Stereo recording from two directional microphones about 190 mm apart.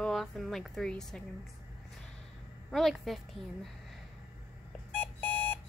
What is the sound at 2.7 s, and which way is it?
Speech, centre (ahead or behind).